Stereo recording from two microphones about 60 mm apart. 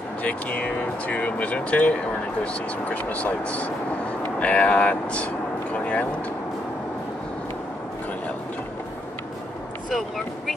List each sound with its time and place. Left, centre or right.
0.2 s speech: left
9.8 s speech: centre